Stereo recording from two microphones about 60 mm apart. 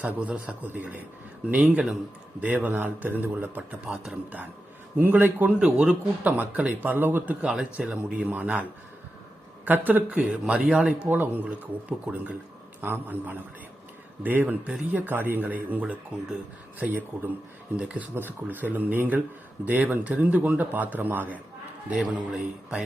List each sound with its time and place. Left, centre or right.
0.0 s speech: right
3.8 s speech: centre
4.9 s speech: right
7.4 s speech: centre
8.3 s speech: right
9.6 s speech: right; by 11.1 s centre
11.1 s speech: right
18.1 s speech: right; by 22.8 s centre